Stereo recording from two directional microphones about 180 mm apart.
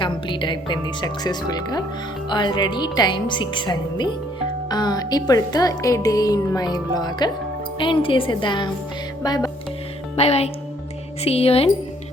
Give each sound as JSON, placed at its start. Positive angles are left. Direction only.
{"t": 0.0, "sound": "speech", "side_deg": 25}
{"t": 10.2, "sound": "speech", "side_deg": 35}